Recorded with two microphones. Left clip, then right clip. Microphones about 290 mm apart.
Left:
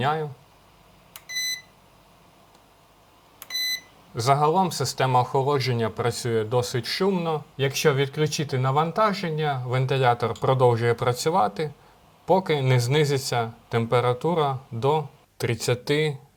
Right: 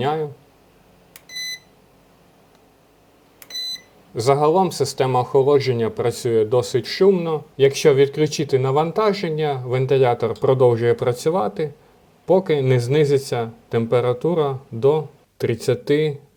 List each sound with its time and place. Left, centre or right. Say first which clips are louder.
0.0 s speech: right 3 dB; left
4.1 s speech: right 4 dB; left